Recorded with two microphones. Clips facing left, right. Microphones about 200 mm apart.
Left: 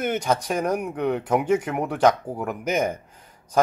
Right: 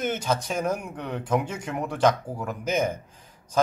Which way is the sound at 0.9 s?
65° left (ahead or behind).